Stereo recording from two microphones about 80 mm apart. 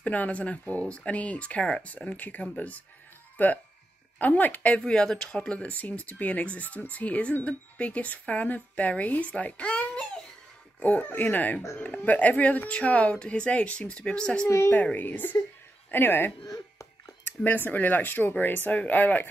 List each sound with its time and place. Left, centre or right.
0.0 s speech: centre
17.4 s speech: left